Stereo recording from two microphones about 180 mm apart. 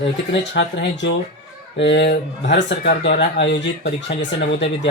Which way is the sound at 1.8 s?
75° left (ahead or behind).